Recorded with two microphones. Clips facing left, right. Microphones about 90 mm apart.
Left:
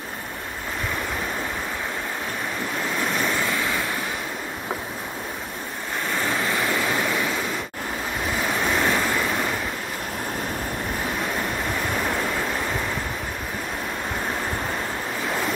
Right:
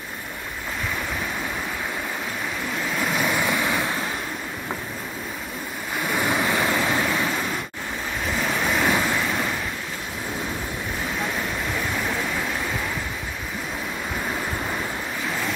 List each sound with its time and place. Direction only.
3.0 s waves: 5° right (ahead or behind)
6.0 s waves: 15° right (ahead or behind)
8.6 s waves: 5° right (ahead or behind)